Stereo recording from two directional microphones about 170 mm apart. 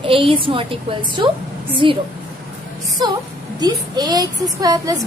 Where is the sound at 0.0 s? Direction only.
30° right (ahead or behind).